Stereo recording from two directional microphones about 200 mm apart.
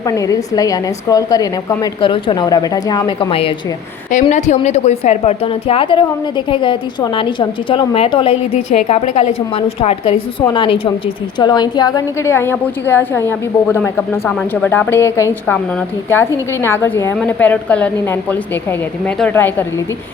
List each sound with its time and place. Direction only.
0.1 s a woman's voice: 15° left (ahead or behind)
4.1 s a woman's voice: 35° left (ahead or behind); by 15.5 s 15° left (ahead or behind)
16.6 s a woman's voice: 10° left (ahead or behind)